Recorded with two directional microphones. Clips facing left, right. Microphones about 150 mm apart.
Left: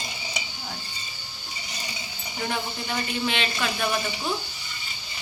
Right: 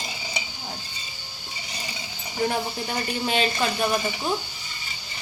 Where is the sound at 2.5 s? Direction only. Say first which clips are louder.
Right 2 dB; 40° right (ahead or behind).